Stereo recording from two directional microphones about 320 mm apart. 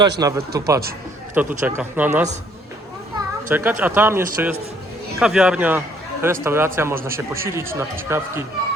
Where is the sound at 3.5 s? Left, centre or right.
Centre.